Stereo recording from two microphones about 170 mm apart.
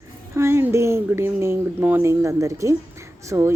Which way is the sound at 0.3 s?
15° right (ahead or behind).